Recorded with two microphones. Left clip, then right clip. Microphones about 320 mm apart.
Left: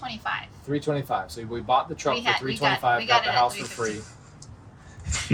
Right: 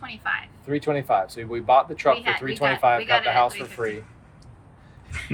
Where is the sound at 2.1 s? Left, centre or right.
Centre.